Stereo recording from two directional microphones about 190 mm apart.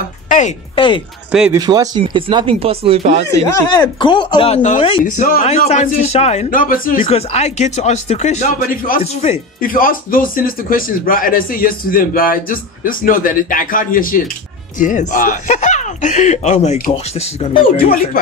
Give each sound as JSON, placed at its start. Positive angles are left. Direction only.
{"t": 0.7, "sound": "speech", "side_deg": 25}
{"t": 1.5, "sound": "speech", "side_deg": -20}
{"t": 3.8, "sound": "speech", "side_deg": 25}
{"t": 4.6, "sound": "speech", "side_deg": 40}
{"t": 7.0, "sound": "speech", "side_deg": 35}
{"t": 9.6, "sound": "speech", "side_deg": 50}